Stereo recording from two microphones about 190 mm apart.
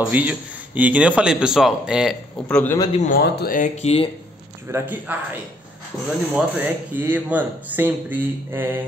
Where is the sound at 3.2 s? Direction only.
55° left (ahead or behind); by 4.0 s 35° left (ahead or behind).